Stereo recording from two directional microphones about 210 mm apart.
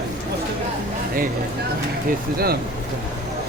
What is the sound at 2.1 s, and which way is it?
Speech, 45° right (ahead or behind).